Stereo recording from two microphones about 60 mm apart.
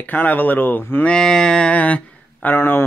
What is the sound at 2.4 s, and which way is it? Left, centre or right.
Speech, left.